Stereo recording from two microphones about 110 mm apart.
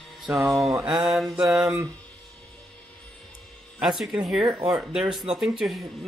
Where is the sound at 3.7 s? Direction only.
5° right (ahead or behind).